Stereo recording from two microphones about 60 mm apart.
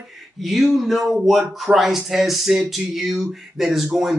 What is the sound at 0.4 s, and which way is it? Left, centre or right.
Speech, centre.